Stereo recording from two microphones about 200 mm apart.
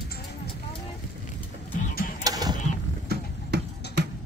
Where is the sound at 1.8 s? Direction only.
45° left (ahead or behind).